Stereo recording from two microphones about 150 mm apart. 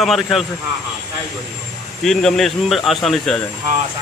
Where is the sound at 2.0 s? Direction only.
5° left (ahead or behind).